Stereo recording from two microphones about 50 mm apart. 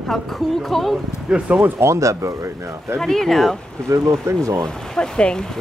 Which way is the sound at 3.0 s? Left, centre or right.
Centre.